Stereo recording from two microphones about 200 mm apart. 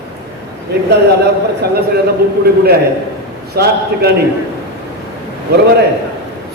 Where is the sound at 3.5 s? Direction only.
55° right (ahead or behind).